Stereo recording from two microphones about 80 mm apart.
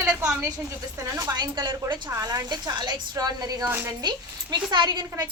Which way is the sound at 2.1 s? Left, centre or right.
Right.